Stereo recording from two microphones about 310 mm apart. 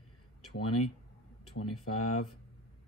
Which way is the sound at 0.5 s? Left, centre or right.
Left.